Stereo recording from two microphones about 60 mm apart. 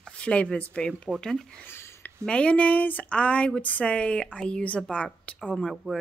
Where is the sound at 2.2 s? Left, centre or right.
Centre.